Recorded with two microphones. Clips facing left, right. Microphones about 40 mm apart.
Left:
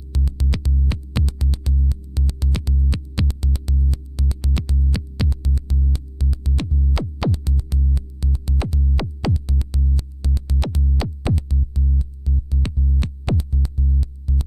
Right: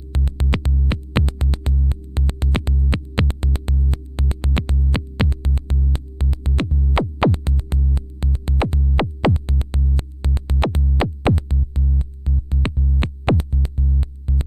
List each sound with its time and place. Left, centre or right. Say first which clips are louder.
0.1 s music: right 3 dB; right